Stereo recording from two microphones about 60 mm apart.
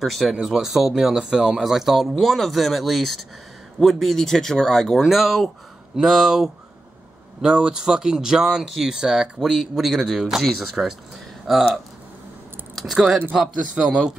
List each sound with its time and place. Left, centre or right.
0.0 s speech: centre
12.7 s speech: centre
13.7 s speech: centre